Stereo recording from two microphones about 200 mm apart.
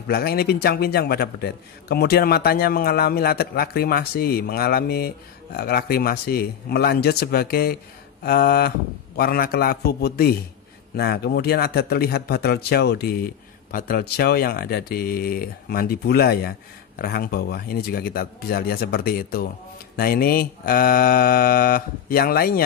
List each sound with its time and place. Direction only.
0.1 s a man's voice: 50° left (ahead or behind)